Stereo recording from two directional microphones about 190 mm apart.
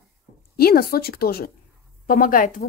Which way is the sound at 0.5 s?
55° left (ahead or behind).